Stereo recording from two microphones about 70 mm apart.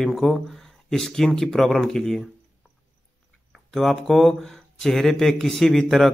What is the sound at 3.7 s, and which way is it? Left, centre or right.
Speech, centre.